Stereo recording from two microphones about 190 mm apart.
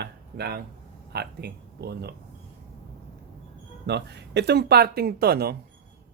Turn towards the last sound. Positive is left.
turn(degrees=-55)  # may be behind; listen again after turning